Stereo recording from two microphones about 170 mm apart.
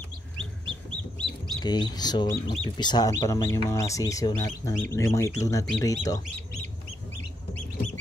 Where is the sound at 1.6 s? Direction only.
25° left (ahead or behind).